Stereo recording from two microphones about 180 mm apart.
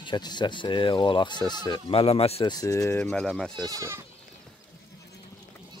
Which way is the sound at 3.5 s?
20° right (ahead or behind).